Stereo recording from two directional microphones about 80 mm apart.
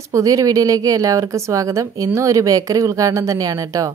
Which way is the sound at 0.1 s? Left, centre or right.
Right.